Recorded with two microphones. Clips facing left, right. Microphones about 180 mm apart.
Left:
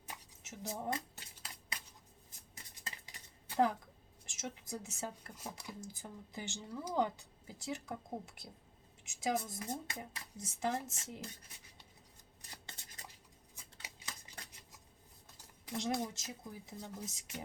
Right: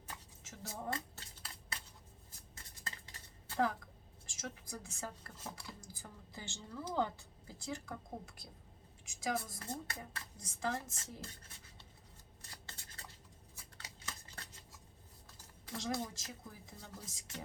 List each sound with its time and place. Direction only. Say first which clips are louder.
0.1 s scissors: left 2 dB; 20° left (ahead or behind)
2.6 s dishes: even; 15° left (ahead or behind)
4.3 s speech: left 3 dB; 20° left (ahead or behind)
9.0 s speech: left 2 dB; 20° left (ahead or behind)
12.4 s a sound: left 1 dB; 15° left (ahead or behind)
13.8 s scissors: right 1 dB; 15° left (ahead or behind)
15.6 s speech: left 3 dB; 20° left (ahead or behind)